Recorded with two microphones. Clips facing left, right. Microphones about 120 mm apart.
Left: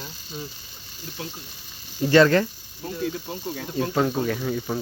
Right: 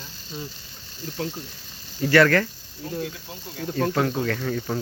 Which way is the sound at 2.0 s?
20° left (ahead or behind).